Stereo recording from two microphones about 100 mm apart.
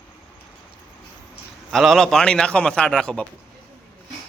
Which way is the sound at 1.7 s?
Centre (ahead or behind).